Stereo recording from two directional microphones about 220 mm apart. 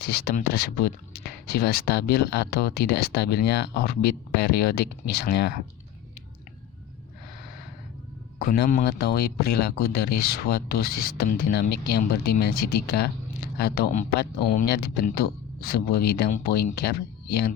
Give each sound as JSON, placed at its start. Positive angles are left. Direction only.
{"t": 0.0, "sound": "speech", "side_deg": 45}
{"t": 8.4, "sound": "speech", "side_deg": 45}